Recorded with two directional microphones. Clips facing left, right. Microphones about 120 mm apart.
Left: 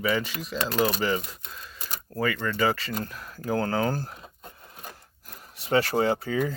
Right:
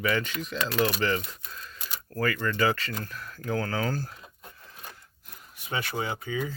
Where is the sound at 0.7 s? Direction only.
40° left (ahead or behind).